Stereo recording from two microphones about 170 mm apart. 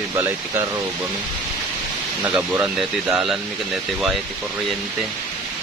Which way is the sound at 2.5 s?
10° right (ahead or behind).